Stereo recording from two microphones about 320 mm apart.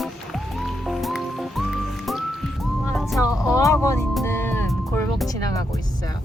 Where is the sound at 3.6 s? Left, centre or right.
Centre.